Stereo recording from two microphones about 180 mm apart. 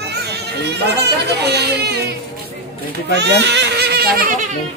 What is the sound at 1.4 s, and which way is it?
Speech, 65° right (ahead or behind).